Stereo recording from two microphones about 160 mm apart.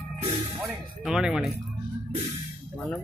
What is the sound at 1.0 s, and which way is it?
Speech, 5° right (ahead or behind).